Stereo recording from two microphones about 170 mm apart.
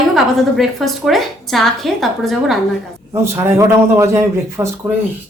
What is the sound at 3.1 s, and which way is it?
A man's voice, 15° right (ahead or behind).